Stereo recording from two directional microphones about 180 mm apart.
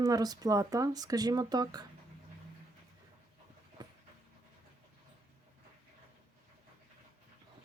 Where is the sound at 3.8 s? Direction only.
25° right (ahead or behind).